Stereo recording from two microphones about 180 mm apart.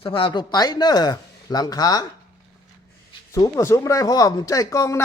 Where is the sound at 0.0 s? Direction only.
30° left (ahead or behind).